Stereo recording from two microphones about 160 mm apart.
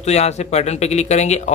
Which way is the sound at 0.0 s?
45° left (ahead or behind).